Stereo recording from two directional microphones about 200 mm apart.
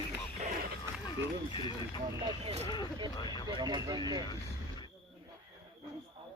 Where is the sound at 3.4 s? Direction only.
20° right (ahead or behind).